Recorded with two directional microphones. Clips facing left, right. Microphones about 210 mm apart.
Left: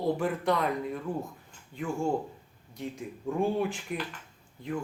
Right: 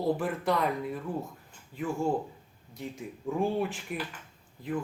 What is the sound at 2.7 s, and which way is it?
Speech, centre (ahead or behind).